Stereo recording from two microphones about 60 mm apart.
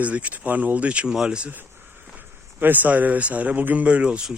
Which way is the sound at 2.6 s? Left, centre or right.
Right.